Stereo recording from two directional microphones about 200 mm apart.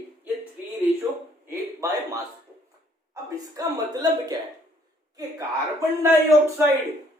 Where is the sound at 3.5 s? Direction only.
20° right (ahead or behind).